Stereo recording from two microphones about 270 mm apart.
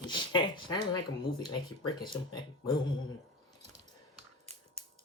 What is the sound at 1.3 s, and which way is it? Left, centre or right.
Speech, centre.